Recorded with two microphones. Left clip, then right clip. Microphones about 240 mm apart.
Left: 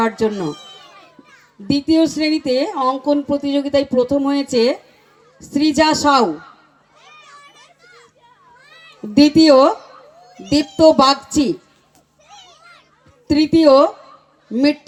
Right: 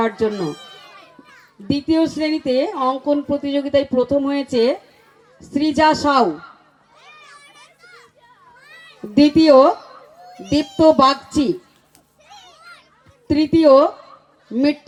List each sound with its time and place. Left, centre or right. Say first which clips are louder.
0.0 s speech: left 1 dB; left
0.6 s a sound: even; right
1.6 s speech: left 3 dB; left
7.0 s children playing: left 1 dB; right
9.1 s speech: left 1 dB; left
13.2 s speech: left 1 dB; left